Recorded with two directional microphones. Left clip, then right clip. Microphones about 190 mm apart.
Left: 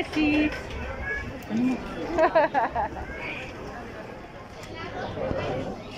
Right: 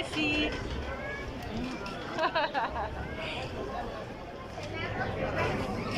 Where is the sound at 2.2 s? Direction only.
25° left (ahead or behind).